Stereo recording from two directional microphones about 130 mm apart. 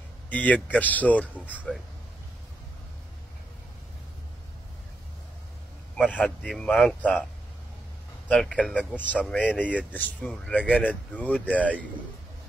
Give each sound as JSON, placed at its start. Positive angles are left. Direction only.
{"t": 0.3, "sound": "a man's voice", "side_deg": 10}
{"t": 6.1, "sound": "speech", "side_deg": 10}
{"t": 8.3, "sound": "speech", "side_deg": 10}